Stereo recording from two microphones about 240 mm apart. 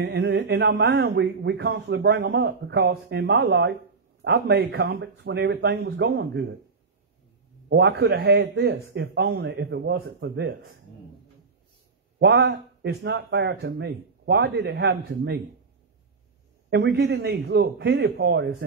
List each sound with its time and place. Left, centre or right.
0.0 s speech: right
7.7 s speech: right
12.2 s speech: right
16.7 s speech: right